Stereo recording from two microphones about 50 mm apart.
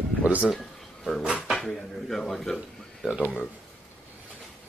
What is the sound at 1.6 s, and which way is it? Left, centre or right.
Speech, centre.